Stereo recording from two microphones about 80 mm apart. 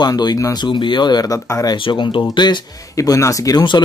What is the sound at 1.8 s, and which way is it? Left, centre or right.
Speech, left.